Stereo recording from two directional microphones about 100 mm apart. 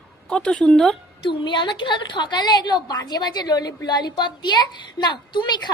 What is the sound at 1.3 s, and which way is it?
A woman's voice, 50° left (ahead or behind).